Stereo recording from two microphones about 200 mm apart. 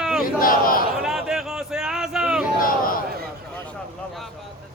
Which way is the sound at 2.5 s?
45° left (ahead or behind).